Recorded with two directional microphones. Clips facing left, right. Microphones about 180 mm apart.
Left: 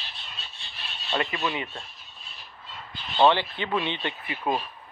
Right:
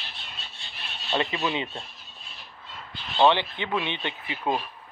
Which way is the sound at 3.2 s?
20° right (ahead or behind).